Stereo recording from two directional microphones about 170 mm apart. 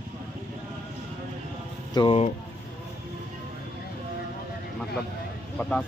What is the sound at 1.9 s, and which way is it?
Speech, 30° left (ahead or behind).